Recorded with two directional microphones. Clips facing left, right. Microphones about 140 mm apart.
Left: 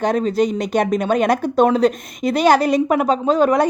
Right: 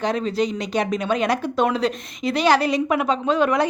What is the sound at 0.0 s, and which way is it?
A woman's voice, 45° left (ahead or behind).